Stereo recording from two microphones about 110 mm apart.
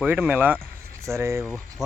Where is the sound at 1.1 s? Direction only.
25° right (ahead or behind).